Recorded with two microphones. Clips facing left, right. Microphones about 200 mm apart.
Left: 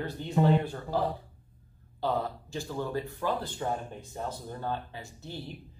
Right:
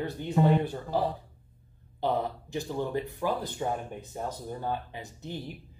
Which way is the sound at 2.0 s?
20° right (ahead or behind).